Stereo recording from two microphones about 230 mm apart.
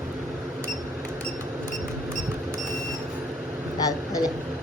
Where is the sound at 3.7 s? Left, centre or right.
Centre.